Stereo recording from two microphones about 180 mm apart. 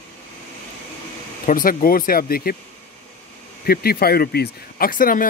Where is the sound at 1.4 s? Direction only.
50° left (ahead or behind).